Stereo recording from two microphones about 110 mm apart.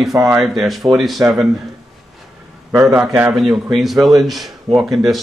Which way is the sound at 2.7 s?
30° right (ahead or behind).